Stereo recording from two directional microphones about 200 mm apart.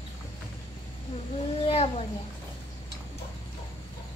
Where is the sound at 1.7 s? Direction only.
30° left (ahead or behind).